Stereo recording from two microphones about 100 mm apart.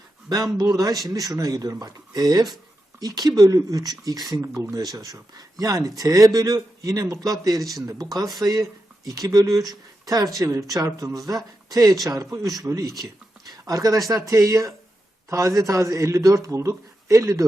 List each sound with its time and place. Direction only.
0.5 s speech: 40° right (ahead or behind)
7.6 s speech: centre (ahead or behind)
7.9 s speech: 35° right (ahead or behind)